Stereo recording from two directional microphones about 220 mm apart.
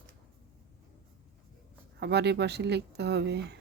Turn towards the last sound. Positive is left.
turn(degrees=-50)  # may be behind; listen again after turning